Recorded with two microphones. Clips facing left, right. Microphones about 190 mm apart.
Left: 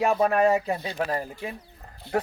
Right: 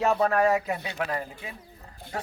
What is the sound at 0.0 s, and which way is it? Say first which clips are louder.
Speech: left 2 dB; 15° left (ahead or behind).